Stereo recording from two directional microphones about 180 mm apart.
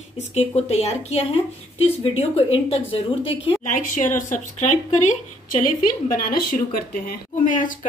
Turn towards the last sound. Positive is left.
turn(degrees=50)  # may be behind; listen again after turning